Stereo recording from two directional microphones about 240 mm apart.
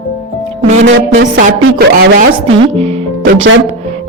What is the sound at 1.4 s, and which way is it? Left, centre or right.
Speech, right.